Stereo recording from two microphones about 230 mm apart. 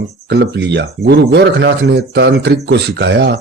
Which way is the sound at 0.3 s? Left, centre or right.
Right.